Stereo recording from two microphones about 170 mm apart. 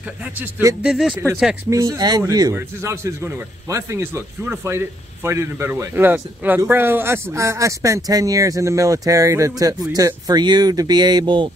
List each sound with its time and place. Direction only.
0.4 s a sound: 15° right (ahead or behind)
0.8 s speech: centre (ahead or behind)
1.7 s a man's voice: 20° right (ahead or behind)